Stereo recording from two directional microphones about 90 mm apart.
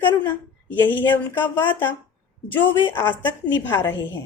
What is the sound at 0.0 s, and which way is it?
A woman's voice, 20° left (ahead or behind).